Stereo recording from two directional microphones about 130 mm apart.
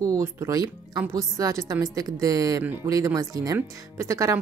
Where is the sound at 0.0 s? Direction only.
25° right (ahead or behind).